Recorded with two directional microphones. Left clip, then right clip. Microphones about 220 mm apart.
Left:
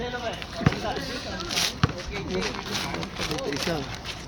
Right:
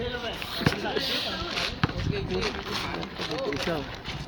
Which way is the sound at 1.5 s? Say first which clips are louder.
Left 3 dB; 35° left (ahead or behind).